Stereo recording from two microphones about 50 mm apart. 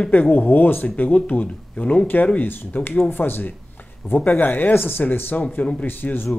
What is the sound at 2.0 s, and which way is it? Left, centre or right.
Speech, left.